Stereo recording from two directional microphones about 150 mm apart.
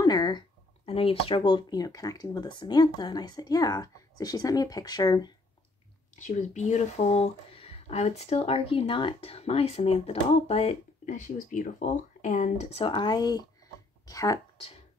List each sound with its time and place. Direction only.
0.0 s speech: 25° left (ahead or behind)
6.1 s speech: 55° left (ahead or behind)
12.8 s speech: 30° left (ahead or behind)